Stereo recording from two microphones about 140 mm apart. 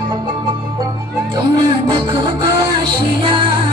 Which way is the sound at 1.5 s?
35° right (ahead or behind).